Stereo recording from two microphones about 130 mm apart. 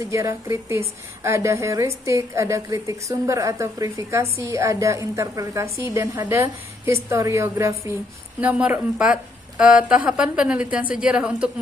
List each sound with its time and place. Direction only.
0.0 s a woman's voice: 25° right (ahead or behind)
8.4 s a woman's voice: 10° right (ahead or behind)